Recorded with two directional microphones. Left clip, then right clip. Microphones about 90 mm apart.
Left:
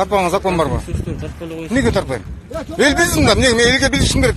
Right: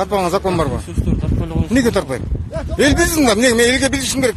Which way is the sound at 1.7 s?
90° right.